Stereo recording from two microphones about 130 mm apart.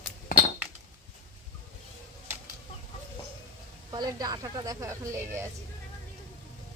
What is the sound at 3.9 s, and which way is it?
A woman's voice, 30° right (ahead or behind).